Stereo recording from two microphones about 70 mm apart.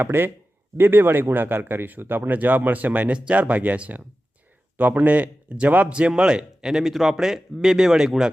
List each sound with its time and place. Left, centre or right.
0.0 s a man's voice: right; by 8.3 s centre